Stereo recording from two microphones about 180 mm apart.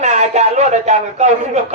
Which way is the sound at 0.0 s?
40° right (ahead or behind).